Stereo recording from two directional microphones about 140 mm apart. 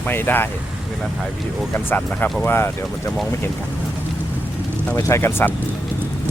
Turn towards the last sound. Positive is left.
turn(degrees=15)  # may be behind; listen again after turning